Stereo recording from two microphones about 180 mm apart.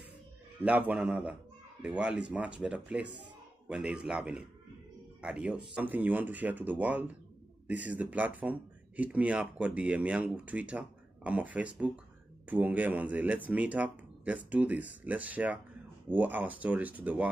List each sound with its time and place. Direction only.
0.6 s speech: 10° right (ahead or behind)